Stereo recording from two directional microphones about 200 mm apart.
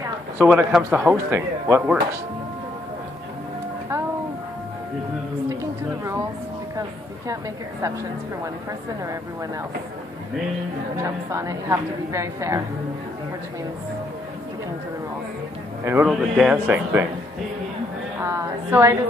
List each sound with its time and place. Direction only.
0.4 s a woman's voice: 5° right (ahead or behind)
5.5 s a sound: 15° right (ahead or behind)
11.0 s a woman's voice: 15° right (ahead or behind)
15.8 s a man's voice: 10° right (ahead or behind)
18.2 s a woman's voice: 15° right (ahead or behind)